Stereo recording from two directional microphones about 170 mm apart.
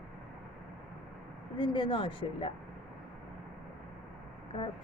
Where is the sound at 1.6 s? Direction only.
25° left (ahead or behind).